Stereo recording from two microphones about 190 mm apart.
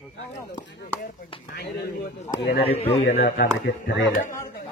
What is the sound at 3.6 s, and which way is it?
Speech, 65° left (ahead or behind).